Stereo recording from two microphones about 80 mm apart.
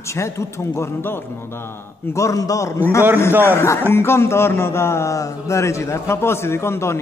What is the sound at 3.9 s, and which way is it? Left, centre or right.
A man's voice, left.